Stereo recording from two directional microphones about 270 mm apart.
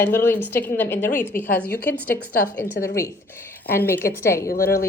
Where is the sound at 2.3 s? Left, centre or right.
Left.